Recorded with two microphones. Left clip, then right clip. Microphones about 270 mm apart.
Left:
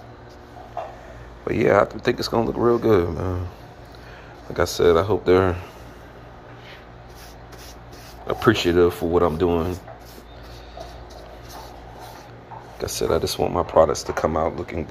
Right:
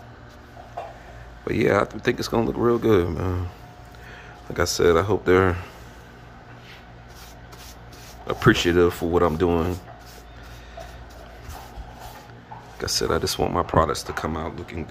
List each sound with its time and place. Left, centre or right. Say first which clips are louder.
1.4 s speech: left 3 dB; centre
4.6 s speech: left 2 dB; centre
8.3 s speech: even; centre
12.7 s speech: left 1 dB; centre